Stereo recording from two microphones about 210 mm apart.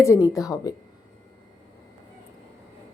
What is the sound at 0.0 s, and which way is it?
Speech, 15° left (ahead or behind).